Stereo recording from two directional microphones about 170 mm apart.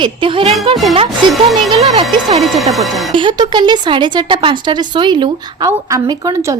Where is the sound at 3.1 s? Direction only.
25° right (ahead or behind).